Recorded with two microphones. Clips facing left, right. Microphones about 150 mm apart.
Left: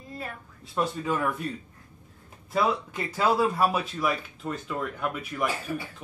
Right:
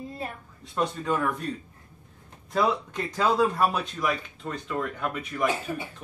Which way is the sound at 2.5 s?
5° left (ahead or behind).